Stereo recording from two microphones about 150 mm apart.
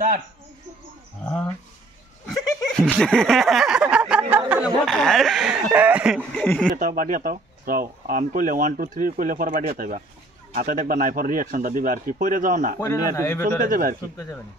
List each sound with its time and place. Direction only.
1.2 s speech: 10° left (ahead or behind)
2.8 s speech: 5° right (ahead or behind)
4.8 s speech: centre (ahead or behind)
6.3 s speech: 5° left (ahead or behind)
6.8 s speech: 70° right (ahead or behind)
12.8 s speech: 20° left (ahead or behind)
13.6 s speech: 65° right (ahead or behind)